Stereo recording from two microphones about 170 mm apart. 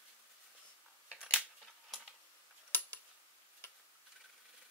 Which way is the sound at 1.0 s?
5° right (ahead or behind).